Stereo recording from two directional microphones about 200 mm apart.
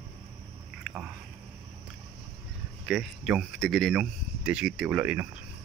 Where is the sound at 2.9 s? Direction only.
Centre (ahead or behind).